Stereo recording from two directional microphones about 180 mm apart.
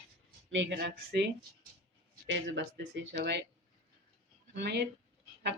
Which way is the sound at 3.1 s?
65° right (ahead or behind).